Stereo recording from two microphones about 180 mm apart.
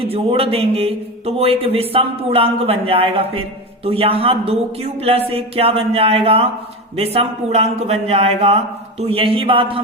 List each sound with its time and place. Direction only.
0.0 s speech: 35° right (ahead or behind)